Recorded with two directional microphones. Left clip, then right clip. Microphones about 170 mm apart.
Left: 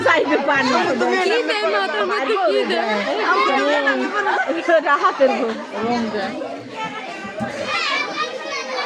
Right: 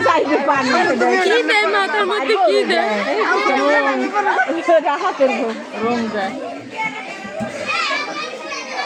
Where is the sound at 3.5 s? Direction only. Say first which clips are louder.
Right 2 dB; 25° right (ahead or behind).